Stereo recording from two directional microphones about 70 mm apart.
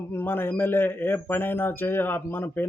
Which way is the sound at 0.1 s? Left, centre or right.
Left.